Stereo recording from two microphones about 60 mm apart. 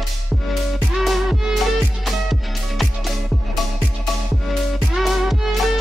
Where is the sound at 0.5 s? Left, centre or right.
Centre.